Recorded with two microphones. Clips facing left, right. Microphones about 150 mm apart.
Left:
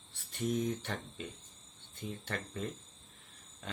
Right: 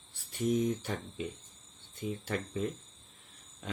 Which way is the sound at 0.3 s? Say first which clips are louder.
Right 4 dB; 5° right (ahead or behind).